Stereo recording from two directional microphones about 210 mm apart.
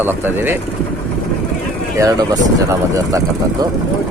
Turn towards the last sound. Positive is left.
turn(degrees=-15)  # may be behind; listen again after turning